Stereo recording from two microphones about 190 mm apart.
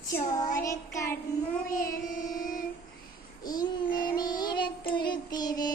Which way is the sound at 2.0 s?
45° left (ahead or behind).